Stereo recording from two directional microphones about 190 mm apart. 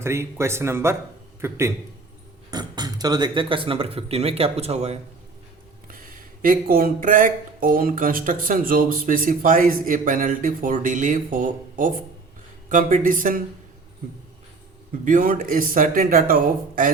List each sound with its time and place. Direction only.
0.0 s speech: 15° right (ahead or behind); by 4.9 s 35° right (ahead or behind)
5.9 s speech: 50° right (ahead or behind)
15.0 s speech: 45° right (ahead or behind)